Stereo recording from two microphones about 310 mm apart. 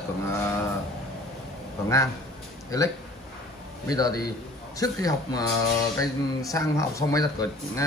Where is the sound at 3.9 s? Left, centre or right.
Centre.